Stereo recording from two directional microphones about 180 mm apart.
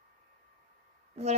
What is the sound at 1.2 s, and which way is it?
Speech, 35° right (ahead or behind).